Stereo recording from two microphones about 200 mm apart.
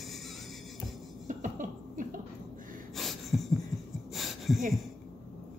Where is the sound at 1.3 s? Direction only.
40° right (ahead or behind).